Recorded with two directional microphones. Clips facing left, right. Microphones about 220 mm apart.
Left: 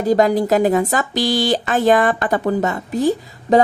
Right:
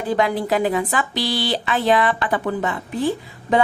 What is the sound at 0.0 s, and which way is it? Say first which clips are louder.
A woman's voice: left 6 dB; 40° left (ahead or behind).